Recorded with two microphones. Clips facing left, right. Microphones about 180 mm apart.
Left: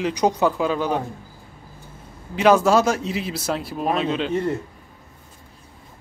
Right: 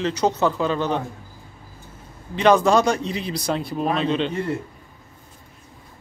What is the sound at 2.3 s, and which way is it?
Speech, 5° left (ahead or behind).